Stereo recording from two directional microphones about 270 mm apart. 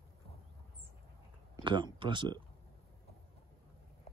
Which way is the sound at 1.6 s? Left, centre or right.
Centre.